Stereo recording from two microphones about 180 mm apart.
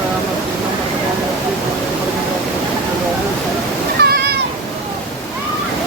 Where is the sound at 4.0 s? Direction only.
60° right (ahead or behind).